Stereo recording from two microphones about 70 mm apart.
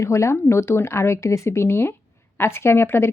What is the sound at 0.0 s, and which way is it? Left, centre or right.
A woman's voice, left.